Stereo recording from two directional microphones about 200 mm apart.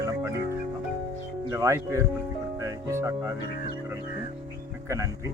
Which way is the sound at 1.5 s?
15° right (ahead or behind).